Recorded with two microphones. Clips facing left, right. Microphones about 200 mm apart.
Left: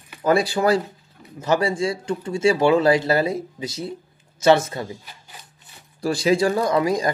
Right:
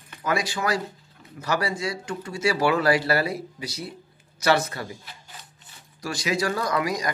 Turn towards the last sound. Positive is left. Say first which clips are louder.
# left 6 dB
turn(degrees=25)  # may be behind; listen again after turning